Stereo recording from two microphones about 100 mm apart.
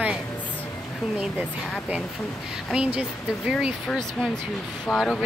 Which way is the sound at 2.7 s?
10° right (ahead or behind).